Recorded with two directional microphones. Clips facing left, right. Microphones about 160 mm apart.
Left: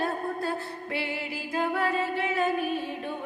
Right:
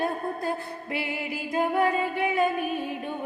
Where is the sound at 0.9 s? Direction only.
20° right (ahead or behind).